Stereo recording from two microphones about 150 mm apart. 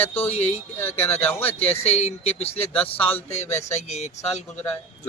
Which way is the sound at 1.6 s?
45° left (ahead or behind).